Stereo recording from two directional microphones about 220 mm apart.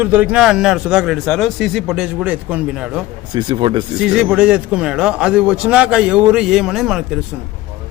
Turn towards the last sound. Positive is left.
turn(degrees=0)  # may be behind; listen again after turning